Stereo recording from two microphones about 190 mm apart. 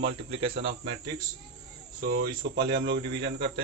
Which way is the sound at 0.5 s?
65° right (ahead or behind).